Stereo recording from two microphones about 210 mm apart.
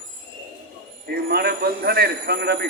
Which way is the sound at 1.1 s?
50° right (ahead or behind).